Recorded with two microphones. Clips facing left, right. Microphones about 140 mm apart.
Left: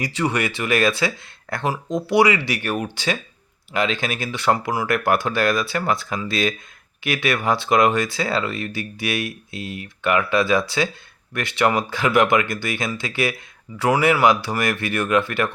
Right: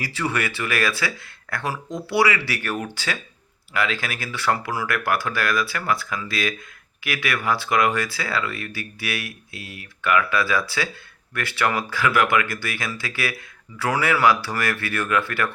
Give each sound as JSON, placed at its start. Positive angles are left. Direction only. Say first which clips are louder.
{"t": 0.0, "sound": "speech", "louder": "left 3 dB", "side_deg": 20}